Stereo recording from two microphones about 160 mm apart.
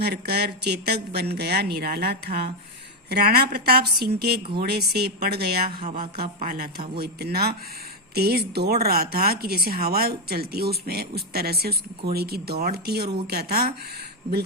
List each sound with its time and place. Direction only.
0.0 s speech: 90° right
3.1 s speech: 75° right (ahead or behind)